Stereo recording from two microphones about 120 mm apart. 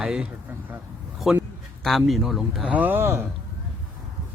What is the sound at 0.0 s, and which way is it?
Speech, 5° right (ahead or behind).